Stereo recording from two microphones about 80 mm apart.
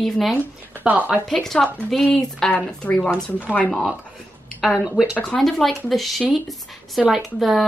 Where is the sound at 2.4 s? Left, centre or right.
Centre.